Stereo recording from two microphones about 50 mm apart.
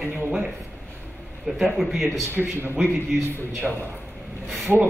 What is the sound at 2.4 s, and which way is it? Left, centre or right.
Speech, right.